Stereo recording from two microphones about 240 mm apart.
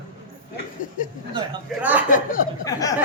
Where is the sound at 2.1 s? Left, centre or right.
Left.